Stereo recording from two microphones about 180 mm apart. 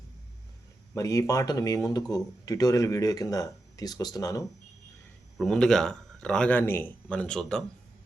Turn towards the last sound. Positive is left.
turn(degrees=5)  # may be behind; listen again after turning